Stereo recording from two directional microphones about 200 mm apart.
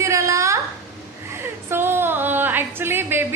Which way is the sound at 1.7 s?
10° right (ahead or behind).